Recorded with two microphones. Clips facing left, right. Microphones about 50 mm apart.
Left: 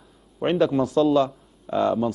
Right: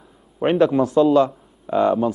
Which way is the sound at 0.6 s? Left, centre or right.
Centre.